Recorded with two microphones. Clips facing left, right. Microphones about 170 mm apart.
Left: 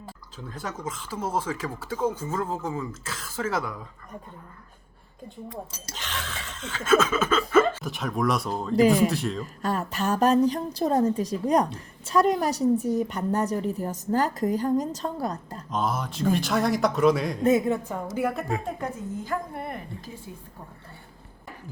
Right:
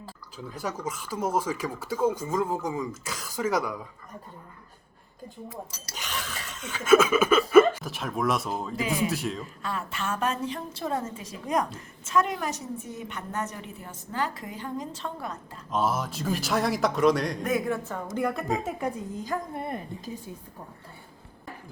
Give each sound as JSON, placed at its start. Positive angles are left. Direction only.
{"t": 0.5, "sound": "speech", "side_deg": -10}
{"t": 5.9, "sound": "speech", "side_deg": -10}
{"t": 7.9, "sound": "a man's voice", "side_deg": 0}
{"t": 9.6, "sound": "a woman's voice", "side_deg": 40}
{"t": 15.7, "sound": "a man's voice", "side_deg": -5}
{"t": 17.4, "sound": "a woman's voice", "side_deg": 20}
{"t": 18.6, "sound": "speech", "side_deg": -15}